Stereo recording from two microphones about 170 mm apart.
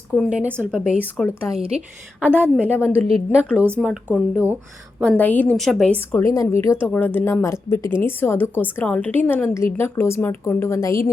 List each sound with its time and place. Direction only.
0.3 s a woman's voice: 10° right (ahead or behind)
1.5 s a woman's voice: 35° right (ahead or behind)
2.2 s a woman's voice: 10° right (ahead or behind)
4.9 s a woman's voice: 5° left (ahead or behind)